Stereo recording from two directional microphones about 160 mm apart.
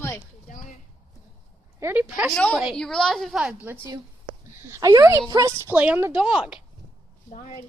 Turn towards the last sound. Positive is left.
turn(degrees=50)  # may be behind; listen again after turning